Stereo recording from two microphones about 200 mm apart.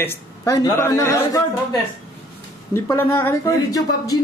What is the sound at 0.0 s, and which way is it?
A man's voice, 15° left (ahead or behind).